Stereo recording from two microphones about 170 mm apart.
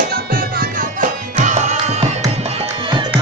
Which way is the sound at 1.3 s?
45° right (ahead or behind).